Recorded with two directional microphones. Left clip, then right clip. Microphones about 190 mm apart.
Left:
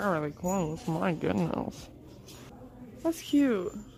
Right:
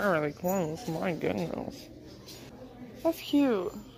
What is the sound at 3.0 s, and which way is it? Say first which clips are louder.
Speech: even; 30° left (ahead or behind).